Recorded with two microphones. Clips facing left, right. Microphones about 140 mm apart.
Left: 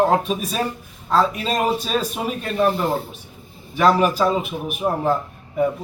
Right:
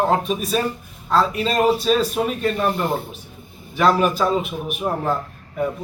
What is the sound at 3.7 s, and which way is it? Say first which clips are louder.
A man's voice: left 1 dB; 5° left (ahead or behind).